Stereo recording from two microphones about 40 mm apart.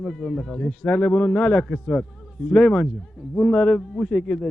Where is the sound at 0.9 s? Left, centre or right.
Left.